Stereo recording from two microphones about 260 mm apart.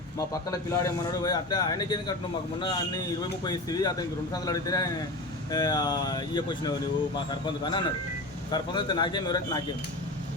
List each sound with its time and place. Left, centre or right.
0.5 s speech: centre